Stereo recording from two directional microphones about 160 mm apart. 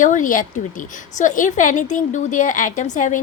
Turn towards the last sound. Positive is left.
turn(degrees=55)  # may be behind; listen again after turning